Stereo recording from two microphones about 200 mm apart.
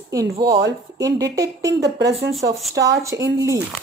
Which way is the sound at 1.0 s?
15° right (ahead or behind).